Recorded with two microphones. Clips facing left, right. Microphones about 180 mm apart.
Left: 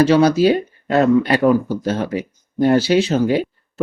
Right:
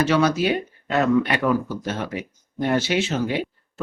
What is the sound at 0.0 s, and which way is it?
Speech, 35° left (ahead or behind).